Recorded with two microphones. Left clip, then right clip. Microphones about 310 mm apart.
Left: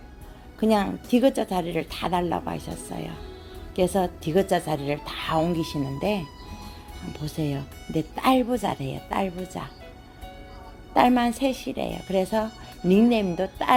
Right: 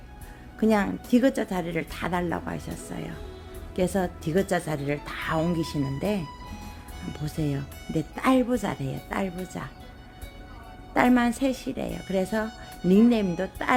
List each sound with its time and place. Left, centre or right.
0.6 s a woman's voice: centre
10.9 s a woman's voice: centre